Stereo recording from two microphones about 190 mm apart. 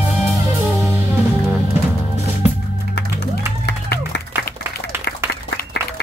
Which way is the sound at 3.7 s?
65° left (ahead or behind).